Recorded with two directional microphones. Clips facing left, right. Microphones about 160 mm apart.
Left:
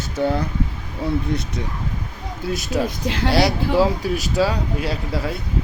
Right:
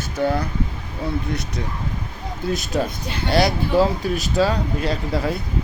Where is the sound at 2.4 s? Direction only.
5° left (ahead or behind).